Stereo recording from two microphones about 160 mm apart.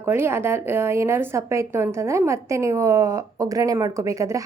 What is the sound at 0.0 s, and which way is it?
A woman's voice, 15° right (ahead or behind).